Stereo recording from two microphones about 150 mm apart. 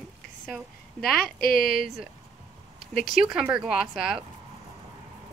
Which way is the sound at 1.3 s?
75° left (ahead or behind).